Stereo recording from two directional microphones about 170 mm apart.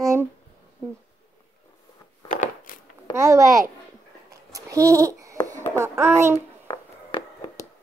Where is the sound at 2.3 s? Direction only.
55° left (ahead or behind).